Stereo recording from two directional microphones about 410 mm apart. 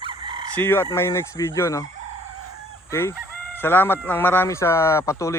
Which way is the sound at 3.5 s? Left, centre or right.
Centre.